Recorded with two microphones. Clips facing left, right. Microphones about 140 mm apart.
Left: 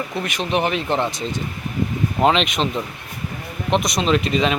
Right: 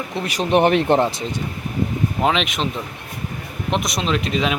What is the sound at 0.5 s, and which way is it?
Speech, 60° right (ahead or behind).